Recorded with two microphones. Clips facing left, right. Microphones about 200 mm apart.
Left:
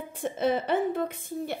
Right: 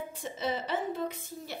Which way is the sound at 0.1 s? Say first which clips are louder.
Left 10 dB; 55° left (ahead or behind).